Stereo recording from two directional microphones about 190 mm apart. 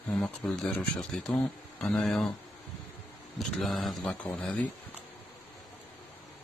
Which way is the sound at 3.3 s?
Centre (ahead or behind).